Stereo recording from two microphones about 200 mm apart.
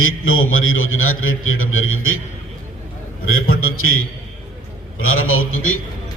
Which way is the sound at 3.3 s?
90° left.